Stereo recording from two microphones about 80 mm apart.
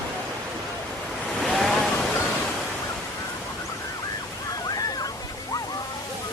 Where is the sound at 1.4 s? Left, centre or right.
Centre.